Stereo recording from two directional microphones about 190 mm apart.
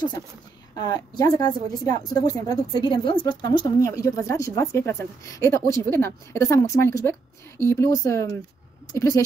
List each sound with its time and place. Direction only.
0.7 s a woman's voice: 20° left (ahead or behind)